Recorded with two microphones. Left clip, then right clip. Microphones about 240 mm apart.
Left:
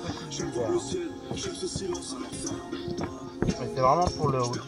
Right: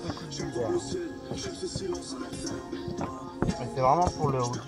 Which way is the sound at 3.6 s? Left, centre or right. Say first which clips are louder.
Left 1 dB; centre.